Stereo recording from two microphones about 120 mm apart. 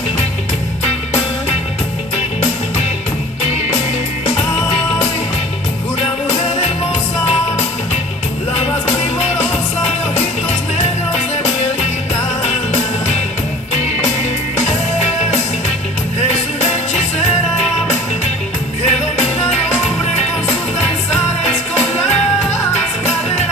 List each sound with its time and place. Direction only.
12.4 s music: 65° left (ahead or behind)
18.9 s music: 60° left (ahead or behind)